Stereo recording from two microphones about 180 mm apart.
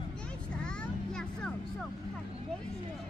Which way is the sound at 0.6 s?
5° left (ahead or behind).